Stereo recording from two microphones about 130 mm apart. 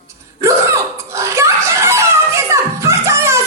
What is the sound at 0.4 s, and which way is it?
Hiccup, 25° right (ahead or behind).